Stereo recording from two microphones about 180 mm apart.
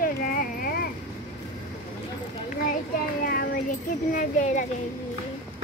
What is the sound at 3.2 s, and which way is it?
Child singing, 55° left (ahead or behind).